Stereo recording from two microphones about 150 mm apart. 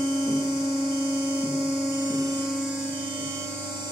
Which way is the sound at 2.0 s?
25° right (ahead or behind).